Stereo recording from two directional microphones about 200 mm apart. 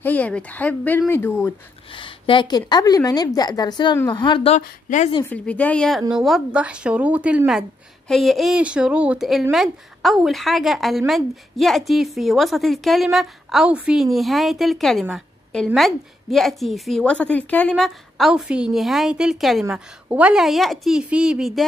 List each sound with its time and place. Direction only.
0.0 s speech: 10° left (ahead or behind)
1.9 s a woman's voice: 25° left (ahead or behind)
5.2 s speech: 10° left (ahead or behind)